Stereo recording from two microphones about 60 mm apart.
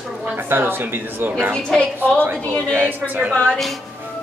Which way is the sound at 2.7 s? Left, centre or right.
Right.